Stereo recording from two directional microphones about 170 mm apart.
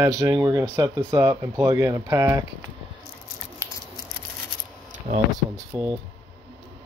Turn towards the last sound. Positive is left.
turn(degrees=-25)  # may be behind; listen again after turning